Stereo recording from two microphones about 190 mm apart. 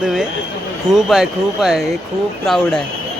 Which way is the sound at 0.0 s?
5° right (ahead or behind).